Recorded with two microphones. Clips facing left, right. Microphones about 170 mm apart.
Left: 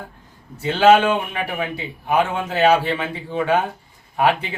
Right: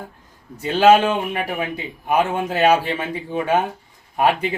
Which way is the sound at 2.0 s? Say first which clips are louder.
Right 1 dB; 15° right (ahead or behind).